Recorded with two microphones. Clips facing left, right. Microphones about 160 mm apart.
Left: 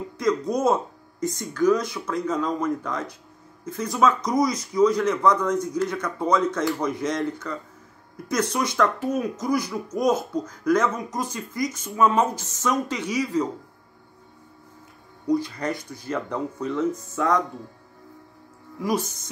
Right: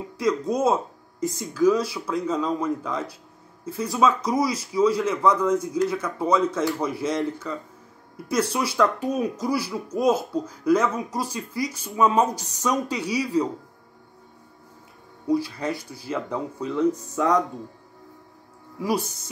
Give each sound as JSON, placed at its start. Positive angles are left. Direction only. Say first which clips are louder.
{"t": 0.2, "sound": "speech", "louder": "even", "side_deg": -5}
{"t": 8.3, "sound": "speech", "louder": "right 1 dB", "side_deg": -30}
{"t": 8.5, "sound": "speech", "louder": "even", "side_deg": -10}
{"t": 15.2, "sound": "speech", "louder": "even", "side_deg": -5}
{"t": 18.8, "sound": "speech", "louder": "even", "side_deg": -10}